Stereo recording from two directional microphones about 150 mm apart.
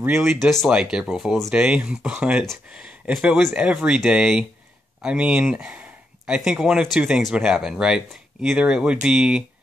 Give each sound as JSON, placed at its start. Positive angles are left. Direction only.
{"t": 0.0, "sound": "speech", "side_deg": -15}
{"t": 0.6, "sound": "speech", "side_deg": -5}